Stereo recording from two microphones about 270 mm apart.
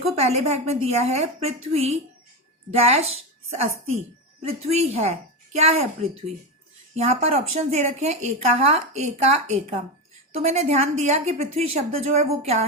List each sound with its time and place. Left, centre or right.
0.2 s a woman's voice: right
6.9 s a woman's voice: right